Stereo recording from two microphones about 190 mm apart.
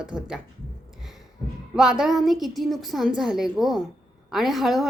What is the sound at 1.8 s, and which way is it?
A woman's voice, 5° right (ahead or behind).